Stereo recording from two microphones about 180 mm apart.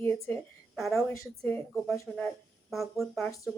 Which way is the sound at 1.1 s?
15° left (ahead or behind).